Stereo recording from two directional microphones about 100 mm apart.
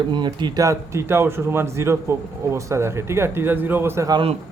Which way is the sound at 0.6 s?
30° right (ahead or behind).